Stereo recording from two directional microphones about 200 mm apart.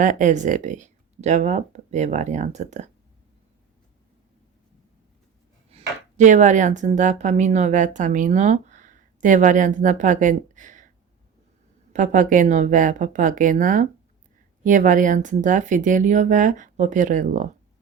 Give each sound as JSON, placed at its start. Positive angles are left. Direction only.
{"t": 0.0, "sound": "speech", "side_deg": -40}
{"t": 5.7, "sound": "speech", "side_deg": -35}
{"t": 11.9, "sound": "speech", "side_deg": -40}